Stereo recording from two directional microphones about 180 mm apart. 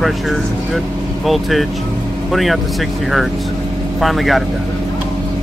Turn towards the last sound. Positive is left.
turn(degrees=0)  # may be behind; listen again after turning